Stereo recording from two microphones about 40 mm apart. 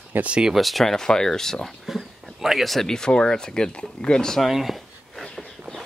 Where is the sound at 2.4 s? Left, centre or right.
Centre.